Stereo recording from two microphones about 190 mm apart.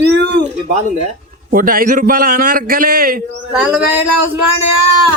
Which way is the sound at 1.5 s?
50° right (ahead or behind).